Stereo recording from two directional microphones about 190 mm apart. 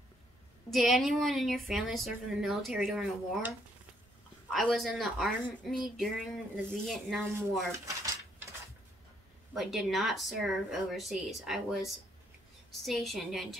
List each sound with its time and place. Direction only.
0.7 s a woman's voice: centre (ahead or behind)
7.7 s dishes: 15° right (ahead or behind)
9.5 s a woman's voice: centre (ahead or behind)